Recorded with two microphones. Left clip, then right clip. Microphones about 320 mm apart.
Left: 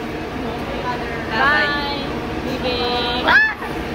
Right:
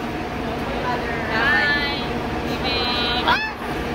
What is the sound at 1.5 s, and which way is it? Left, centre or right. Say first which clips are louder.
Vehicle: left 1 dB; centre.